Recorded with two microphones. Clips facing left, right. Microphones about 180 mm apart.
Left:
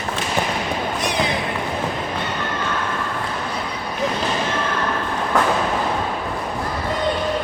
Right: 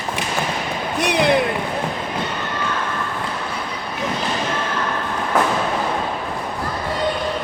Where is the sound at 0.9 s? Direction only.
65° right (ahead or behind).